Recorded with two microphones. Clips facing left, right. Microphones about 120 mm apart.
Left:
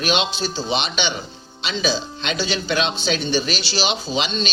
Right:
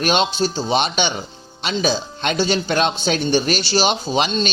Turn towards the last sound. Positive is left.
turn(degrees=-50)  # may be behind; listen again after turning